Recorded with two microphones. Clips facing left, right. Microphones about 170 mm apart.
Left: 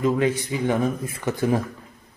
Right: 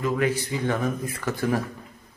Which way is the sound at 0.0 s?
25° left (ahead or behind).